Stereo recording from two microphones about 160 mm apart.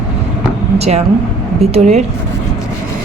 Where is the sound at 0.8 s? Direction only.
40° right (ahead or behind).